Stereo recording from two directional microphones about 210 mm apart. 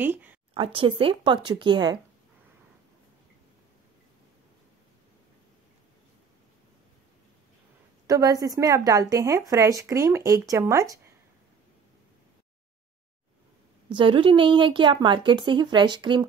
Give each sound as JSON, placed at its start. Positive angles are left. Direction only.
{"t": 0.0, "sound": "speech", "side_deg": -10}
{"t": 0.6, "sound": "a woman's voice", "side_deg": -25}
{"t": 8.1, "sound": "speech", "side_deg": -15}
{"t": 13.8, "sound": "a woman's voice", "side_deg": -25}